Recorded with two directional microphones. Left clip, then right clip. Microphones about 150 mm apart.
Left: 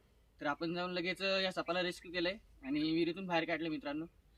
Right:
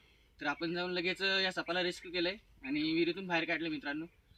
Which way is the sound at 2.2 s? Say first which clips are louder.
Right 1 dB; 5° left (ahead or behind).